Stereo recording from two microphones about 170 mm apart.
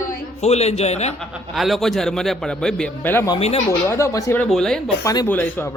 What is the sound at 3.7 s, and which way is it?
Speech, 15° left (ahead or behind).